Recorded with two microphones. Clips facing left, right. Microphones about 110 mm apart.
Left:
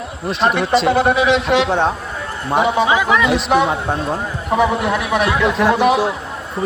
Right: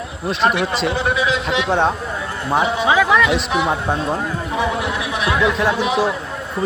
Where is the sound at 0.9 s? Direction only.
55° left (ahead or behind).